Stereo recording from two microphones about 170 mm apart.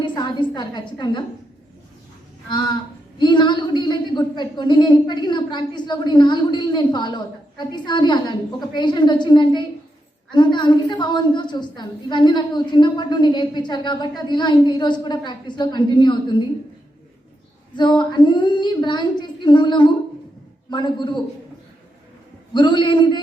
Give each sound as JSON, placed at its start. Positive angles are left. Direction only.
{"t": 0.0, "sound": "a woman's voice", "side_deg": 25}
{"t": 2.5, "sound": "a woman's voice", "side_deg": 25}
{"t": 17.7, "sound": "a woman's voice", "side_deg": 25}
{"t": 22.5, "sound": "a woman's voice", "side_deg": 25}